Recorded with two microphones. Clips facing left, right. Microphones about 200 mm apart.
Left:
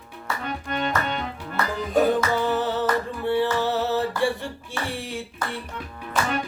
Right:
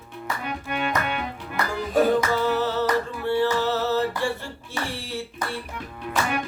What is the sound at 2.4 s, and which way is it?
Music, 15° left (ahead or behind).